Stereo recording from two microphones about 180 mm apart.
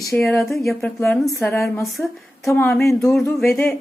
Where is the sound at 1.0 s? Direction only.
10° left (ahead or behind).